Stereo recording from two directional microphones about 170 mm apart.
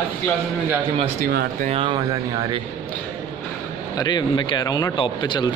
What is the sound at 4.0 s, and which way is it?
Speech, 25° left (ahead or behind).